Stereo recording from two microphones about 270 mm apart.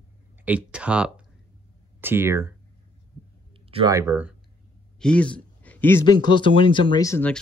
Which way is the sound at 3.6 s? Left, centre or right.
Centre.